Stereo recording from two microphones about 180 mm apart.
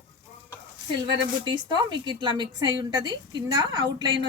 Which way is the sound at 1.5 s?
25° right (ahead or behind).